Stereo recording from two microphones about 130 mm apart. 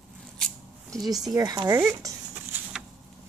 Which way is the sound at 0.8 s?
30° right (ahead or behind).